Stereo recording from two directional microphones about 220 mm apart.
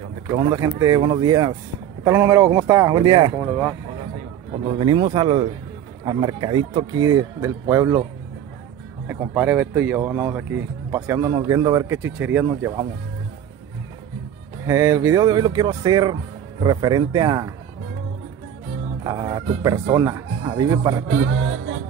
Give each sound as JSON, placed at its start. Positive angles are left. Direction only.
{"t": 0.3, "sound": "speech", "side_deg": -20}
{"t": 3.3, "sound": "speech", "side_deg": -5}
{"t": 4.6, "sound": "speech", "side_deg": -20}
{"t": 9.0, "sound": "speech", "side_deg": -10}
{"t": 14.7, "sound": "speech", "side_deg": -15}
{"t": 19.0, "sound": "speech", "side_deg": -20}